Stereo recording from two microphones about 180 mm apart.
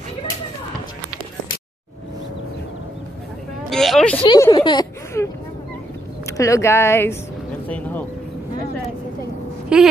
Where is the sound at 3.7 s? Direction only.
Centre (ahead or behind).